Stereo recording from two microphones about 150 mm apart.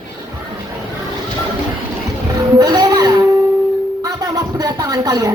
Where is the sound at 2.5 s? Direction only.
25° right (ahead or behind).